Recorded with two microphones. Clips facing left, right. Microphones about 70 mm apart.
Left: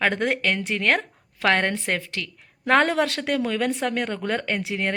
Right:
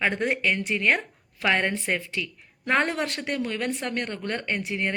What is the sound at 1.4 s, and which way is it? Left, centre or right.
A woman's voice, left.